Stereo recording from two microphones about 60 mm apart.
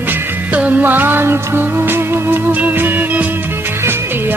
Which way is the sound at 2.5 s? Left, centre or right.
Right.